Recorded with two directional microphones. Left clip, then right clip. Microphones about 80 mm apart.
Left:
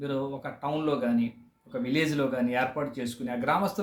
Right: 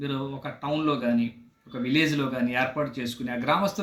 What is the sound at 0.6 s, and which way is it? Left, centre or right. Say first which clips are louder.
Speech: right 2 dB; centre.